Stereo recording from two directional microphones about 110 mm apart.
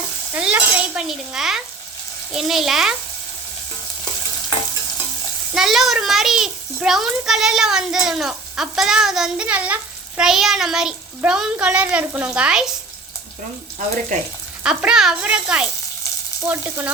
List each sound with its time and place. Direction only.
0.3 s stir: 15° right (ahead or behind)
1.0 s a child's voice: 5° right (ahead or behind)
5.5 s a child's voice: centre (ahead or behind)
14.6 s a woman's voice: 10° right (ahead or behind)